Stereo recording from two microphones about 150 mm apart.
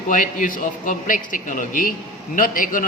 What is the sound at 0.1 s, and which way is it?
A man's voice, 65° left (ahead or behind).